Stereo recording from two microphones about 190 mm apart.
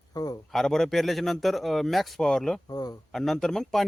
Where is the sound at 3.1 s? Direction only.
Centre (ahead or behind).